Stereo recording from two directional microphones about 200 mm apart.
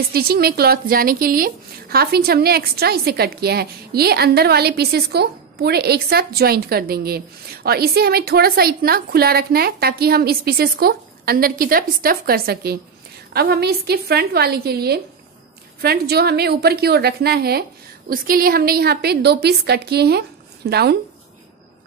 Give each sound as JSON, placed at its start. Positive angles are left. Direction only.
{"t": 0.1, "sound": "speech", "side_deg": -50}